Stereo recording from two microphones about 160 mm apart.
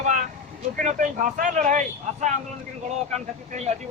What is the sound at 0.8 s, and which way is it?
A man's voice, 55° right (ahead or behind).